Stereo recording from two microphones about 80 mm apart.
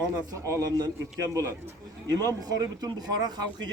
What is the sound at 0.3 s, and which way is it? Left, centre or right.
A man's voice, right.